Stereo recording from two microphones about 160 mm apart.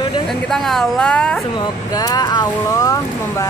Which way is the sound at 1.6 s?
25° left (ahead or behind).